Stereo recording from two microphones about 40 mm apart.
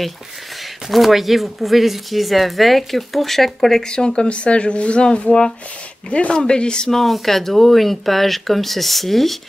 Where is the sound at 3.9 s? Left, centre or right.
Left.